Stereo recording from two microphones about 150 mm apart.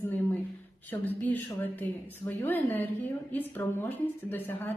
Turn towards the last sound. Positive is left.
turn(degrees=15)  # may be behind; listen again after turning